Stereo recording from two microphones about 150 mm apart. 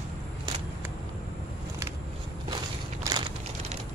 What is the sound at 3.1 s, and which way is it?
Crushing, 20° right (ahead or behind).